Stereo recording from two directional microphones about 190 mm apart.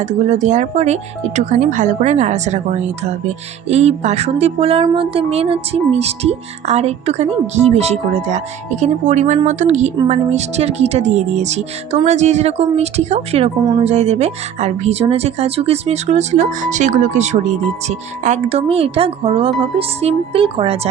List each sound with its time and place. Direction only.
0.0 s speech: 35° right (ahead or behind)